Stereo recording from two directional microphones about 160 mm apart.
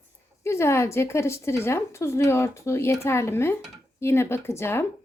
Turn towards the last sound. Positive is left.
turn(degrees=15)  # may be behind; listen again after turning